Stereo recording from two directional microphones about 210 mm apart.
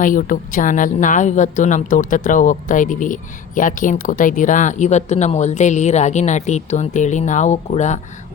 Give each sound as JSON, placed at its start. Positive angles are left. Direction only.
{"t": 0.0, "sound": "a woman's voice", "side_deg": 40}